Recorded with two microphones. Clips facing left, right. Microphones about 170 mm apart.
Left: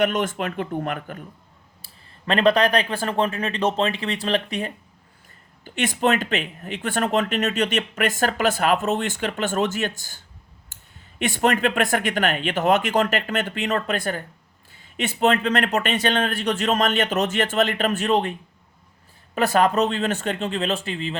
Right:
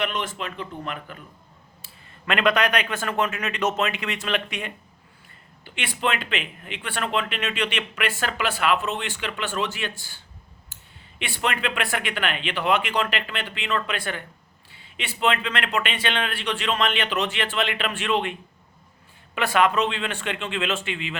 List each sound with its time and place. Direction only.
0.0 s speech: 45° left (ahead or behind)
2.2 s speech: 35° left (ahead or behind)
10.7 s a sound: 50° left (ahead or behind)
11.2 s speech: 45° left (ahead or behind)